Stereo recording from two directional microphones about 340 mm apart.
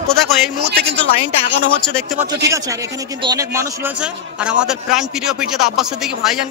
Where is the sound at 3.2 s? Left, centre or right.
Centre.